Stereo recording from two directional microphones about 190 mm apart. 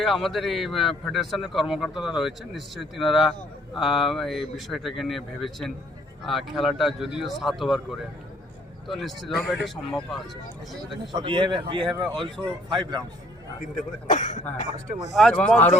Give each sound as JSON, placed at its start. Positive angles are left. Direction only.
{"t": 0.0, "sound": "a man's voice", "side_deg": 0}
{"t": 11.1, "sound": "a man's voice", "side_deg": -25}
{"t": 14.1, "sound": "speech", "side_deg": 40}
{"t": 14.9, "sound": "a man's voice", "side_deg": 0}